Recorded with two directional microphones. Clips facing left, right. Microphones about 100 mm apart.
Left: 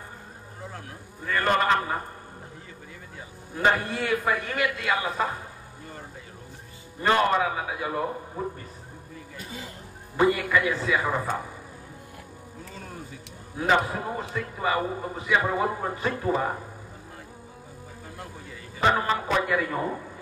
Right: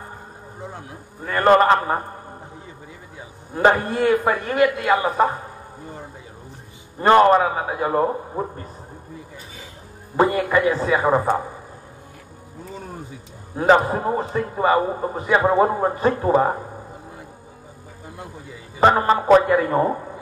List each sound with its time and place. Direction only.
0.6 s a sound: 20° right (ahead or behind)
1.3 s a man's voice: 45° right (ahead or behind)
3.5 s a man's voice: 40° right (ahead or behind)
7.0 s a man's voice: 40° right (ahead or behind)
10.1 s a man's voice: 40° right (ahead or behind)
13.6 s a man's voice: 40° right (ahead or behind)
18.8 s a man's voice: 40° right (ahead or behind)